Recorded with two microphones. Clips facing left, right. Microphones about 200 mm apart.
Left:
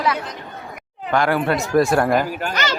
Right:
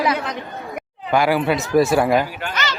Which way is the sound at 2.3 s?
45° left (ahead or behind).